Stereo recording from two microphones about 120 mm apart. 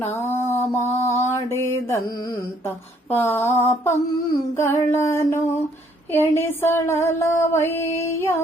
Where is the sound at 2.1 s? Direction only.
35° left (ahead or behind).